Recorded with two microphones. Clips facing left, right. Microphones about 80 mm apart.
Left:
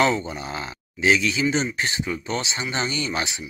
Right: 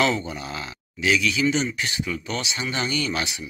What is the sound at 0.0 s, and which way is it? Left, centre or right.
Speech, left.